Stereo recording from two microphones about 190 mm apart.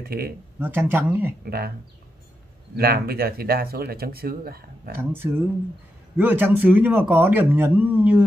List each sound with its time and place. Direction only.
0.0 s speech: 55° right (ahead or behind)
0.6 s speech: 10° right (ahead or behind)
1.4 s speech: 55° right (ahead or behind)
2.7 s speech: 55° right (ahead or behind)
4.9 s speech: 10° right (ahead or behind)